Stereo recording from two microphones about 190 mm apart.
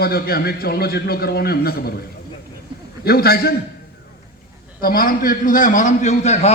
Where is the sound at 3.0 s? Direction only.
55° left (ahead or behind).